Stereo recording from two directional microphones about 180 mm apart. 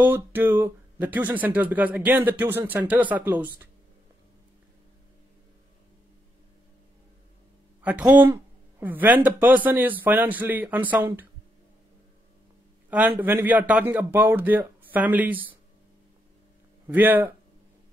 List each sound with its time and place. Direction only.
0.0 s speech: 10° right (ahead or behind)
7.8 s speech: 10° right (ahead or behind)
13.2 s speech: 10° right (ahead or behind)
16.8 s speech: 10° right (ahead or behind)